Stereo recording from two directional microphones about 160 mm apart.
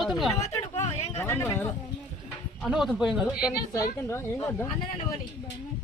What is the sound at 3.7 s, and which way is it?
Speech, 15° left (ahead or behind).